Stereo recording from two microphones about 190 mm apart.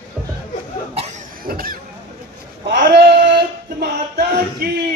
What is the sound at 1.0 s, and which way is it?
Cough, 40° right (ahead or behind).